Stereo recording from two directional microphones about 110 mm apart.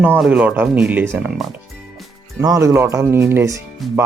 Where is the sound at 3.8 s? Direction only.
Centre (ahead or behind).